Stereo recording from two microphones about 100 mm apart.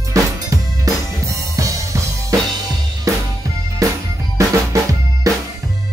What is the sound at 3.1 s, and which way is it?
Music, 35° right (ahead or behind).